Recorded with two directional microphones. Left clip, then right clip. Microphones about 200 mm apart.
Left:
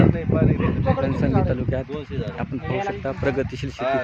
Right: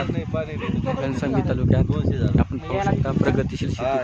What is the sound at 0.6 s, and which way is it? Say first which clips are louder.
Speech: left 3 dB; 55° right (ahead or behind).